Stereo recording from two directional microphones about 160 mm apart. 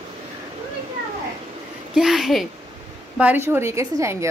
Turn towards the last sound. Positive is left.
turn(degrees=-20)  # may be behind; listen again after turning